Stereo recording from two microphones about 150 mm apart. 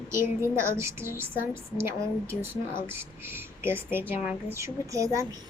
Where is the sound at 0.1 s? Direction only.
15° right (ahead or behind).